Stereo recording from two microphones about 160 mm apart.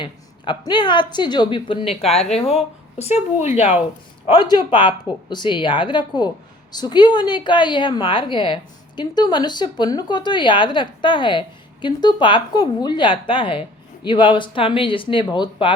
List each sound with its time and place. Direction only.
0.0 s a woman's voice: 30° left (ahead or behind)
2.3 s speech: centre (ahead or behind)
3.0 s speech: 40° left (ahead or behind)
4.3 s a woman's voice: 30° left (ahead or behind)